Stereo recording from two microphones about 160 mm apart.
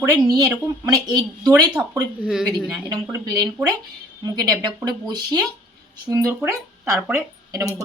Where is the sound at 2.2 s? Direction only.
5° right (ahead or behind).